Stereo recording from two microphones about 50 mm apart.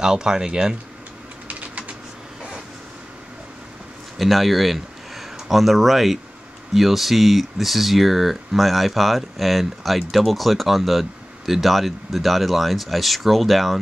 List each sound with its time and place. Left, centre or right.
0.0 s speech: centre
1.6 s typing: right
4.2 s speech: centre